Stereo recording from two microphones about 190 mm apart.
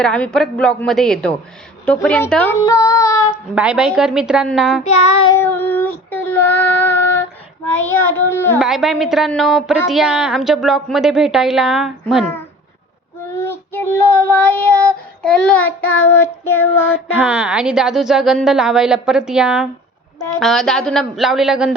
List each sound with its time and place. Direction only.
0.0 s a woman's voice: 5° left (ahead or behind)
1.8 s child singing: 5° left (ahead or behind)
3.5 s a woman's voice: 5° right (ahead or behind)
4.8 s child singing: 35° left (ahead or behind)
5.3 s child singing: 10° left (ahead or behind)
8.5 s a woman's voice: centre (ahead or behind)
12.2 s child singing: 10° left (ahead or behind)
17.2 s a woman's voice: 5° right (ahead or behind)